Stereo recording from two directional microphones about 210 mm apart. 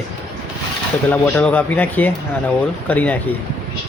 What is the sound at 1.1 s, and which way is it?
Speech, 5° left (ahead or behind).